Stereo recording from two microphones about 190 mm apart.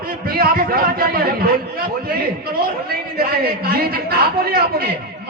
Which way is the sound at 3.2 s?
55° right (ahead or behind).